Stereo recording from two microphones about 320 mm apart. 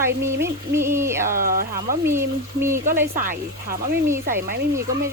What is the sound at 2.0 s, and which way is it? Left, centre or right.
Speech, centre.